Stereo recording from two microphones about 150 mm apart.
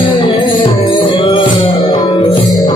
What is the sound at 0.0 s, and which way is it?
Music, 35° left (ahead or behind).